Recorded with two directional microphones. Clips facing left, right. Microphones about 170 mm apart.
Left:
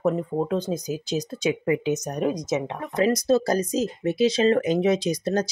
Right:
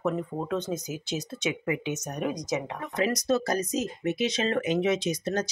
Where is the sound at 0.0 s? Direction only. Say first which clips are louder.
Left 6 dB; 30° left (ahead or behind).